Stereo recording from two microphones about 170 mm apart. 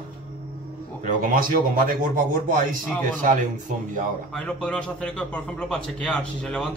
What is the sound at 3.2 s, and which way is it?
Speech, 50° right (ahead or behind).